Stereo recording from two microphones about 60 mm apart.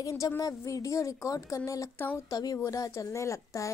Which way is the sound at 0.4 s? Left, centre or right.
Left.